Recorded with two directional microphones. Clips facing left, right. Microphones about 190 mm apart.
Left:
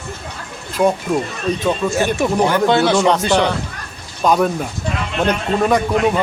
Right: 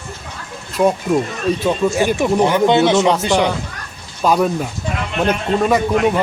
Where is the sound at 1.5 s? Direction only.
10° right (ahead or behind).